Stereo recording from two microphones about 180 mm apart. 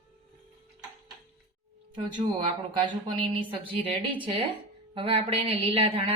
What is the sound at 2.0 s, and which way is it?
Speech, 25° right (ahead or behind).